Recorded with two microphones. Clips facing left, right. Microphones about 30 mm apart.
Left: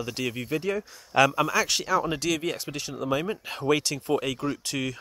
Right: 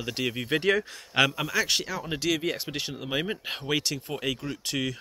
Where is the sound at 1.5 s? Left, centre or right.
Centre.